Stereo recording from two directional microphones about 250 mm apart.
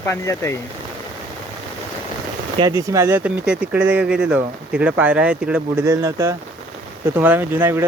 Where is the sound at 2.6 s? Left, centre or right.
Centre.